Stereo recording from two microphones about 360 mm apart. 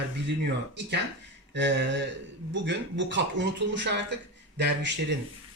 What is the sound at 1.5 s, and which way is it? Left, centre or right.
Speech, right.